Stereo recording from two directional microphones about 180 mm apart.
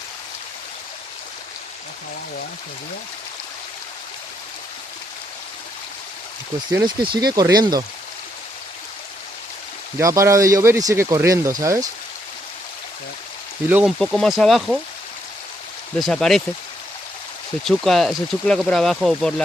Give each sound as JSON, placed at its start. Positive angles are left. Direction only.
{"t": 6.7, "sound": "speech", "side_deg": -25}
{"t": 10.0, "sound": "speech", "side_deg": -15}
{"t": 13.7, "sound": "speech", "side_deg": -10}
{"t": 14.0, "sound": "speech", "side_deg": 0}
{"t": 16.0, "sound": "speech", "side_deg": 0}
{"t": 17.7, "sound": "speech", "side_deg": 0}